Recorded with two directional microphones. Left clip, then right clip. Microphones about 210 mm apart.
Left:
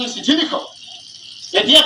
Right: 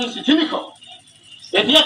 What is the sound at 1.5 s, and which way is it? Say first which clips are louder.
Speech: left 3 dB; 25° left (ahead or behind).